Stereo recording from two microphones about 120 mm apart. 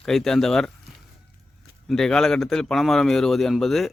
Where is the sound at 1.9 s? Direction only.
5° left (ahead or behind).